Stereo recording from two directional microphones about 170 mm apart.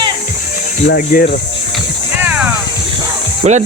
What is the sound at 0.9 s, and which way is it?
Speech, 60° left (ahead or behind).